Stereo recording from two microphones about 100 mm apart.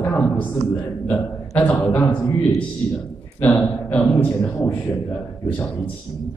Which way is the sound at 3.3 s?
20° left (ahead or behind).